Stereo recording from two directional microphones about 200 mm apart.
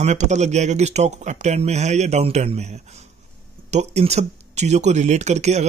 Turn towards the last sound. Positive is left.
turn(degrees=-35)  # may be behind; listen again after turning